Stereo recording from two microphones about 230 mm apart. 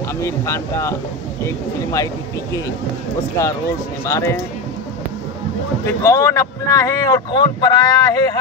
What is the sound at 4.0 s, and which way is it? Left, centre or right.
Speech, centre.